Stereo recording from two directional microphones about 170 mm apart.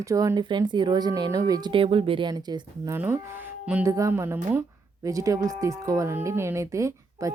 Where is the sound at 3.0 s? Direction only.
10° right (ahead or behind).